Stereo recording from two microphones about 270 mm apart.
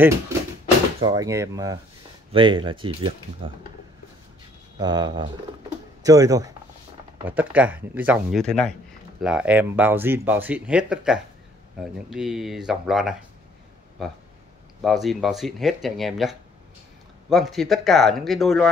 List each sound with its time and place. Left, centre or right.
1.0 s speech: centre
4.7 s speech: centre